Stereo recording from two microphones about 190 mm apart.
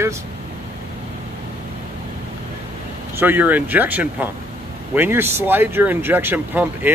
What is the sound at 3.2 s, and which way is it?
Speech, 10° right (ahead or behind).